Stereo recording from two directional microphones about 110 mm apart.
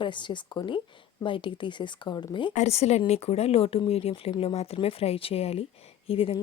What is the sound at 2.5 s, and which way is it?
A woman's voice, 80° left.